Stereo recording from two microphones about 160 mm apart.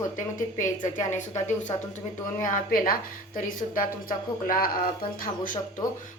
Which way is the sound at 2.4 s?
60° left (ahead or behind).